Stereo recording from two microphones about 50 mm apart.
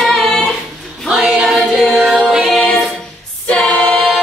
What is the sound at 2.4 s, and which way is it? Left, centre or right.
Music, centre.